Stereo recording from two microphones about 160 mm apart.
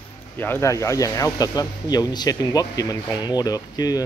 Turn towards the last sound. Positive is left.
turn(degrees=25)  # may be behind; listen again after turning